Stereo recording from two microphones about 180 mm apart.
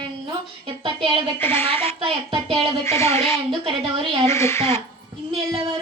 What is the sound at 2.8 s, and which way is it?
Speech, 15° left (ahead or behind).